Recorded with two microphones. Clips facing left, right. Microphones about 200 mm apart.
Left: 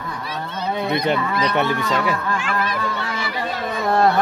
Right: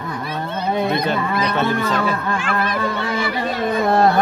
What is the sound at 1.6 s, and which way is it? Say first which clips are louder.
Speech: right 3 dB; 15° left (ahead or behind).